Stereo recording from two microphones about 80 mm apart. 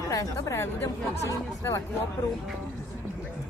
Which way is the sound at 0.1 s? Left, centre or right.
Left.